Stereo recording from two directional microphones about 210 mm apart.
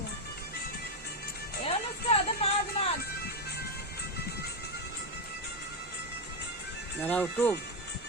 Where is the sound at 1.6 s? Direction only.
30° left (ahead or behind).